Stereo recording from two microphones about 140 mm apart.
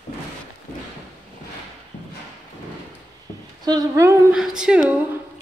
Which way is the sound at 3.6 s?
30° right (ahead or behind).